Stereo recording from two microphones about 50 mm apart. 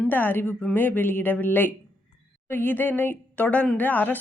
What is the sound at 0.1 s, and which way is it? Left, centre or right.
A woman's voice, left.